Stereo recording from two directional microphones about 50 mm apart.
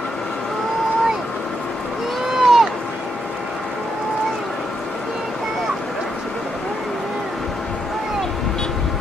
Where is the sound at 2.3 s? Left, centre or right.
Centre.